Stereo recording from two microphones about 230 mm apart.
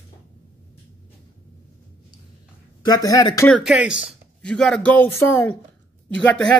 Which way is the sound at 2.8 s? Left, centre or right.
Centre.